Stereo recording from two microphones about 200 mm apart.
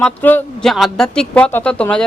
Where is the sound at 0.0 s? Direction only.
10° left (ahead or behind).